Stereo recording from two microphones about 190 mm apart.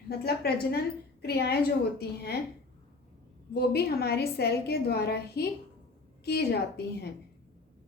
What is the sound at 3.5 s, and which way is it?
A woman's voice, 55° left (ahead or behind).